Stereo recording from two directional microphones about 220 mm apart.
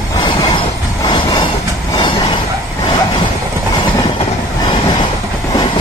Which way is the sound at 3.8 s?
20° left (ahead or behind).